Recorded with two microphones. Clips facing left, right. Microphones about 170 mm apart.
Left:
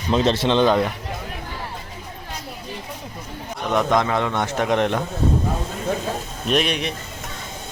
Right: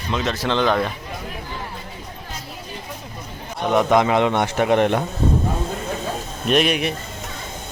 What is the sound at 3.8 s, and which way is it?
Speech, 15° right (ahead or behind).